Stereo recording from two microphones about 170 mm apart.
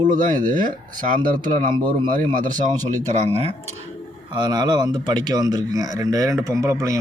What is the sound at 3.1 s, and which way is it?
Speech, 40° right (ahead or behind).